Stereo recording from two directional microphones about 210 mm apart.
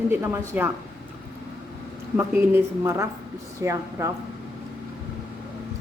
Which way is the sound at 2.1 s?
10° right (ahead or behind).